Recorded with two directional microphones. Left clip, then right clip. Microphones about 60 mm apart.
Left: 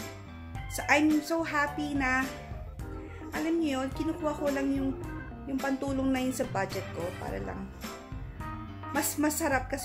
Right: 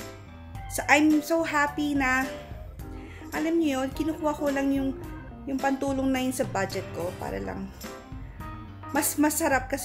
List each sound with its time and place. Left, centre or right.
0.7 s a woman's voice: centre
3.4 s a woman's voice: centre
8.5 s music: centre
9.1 s a woman's voice: centre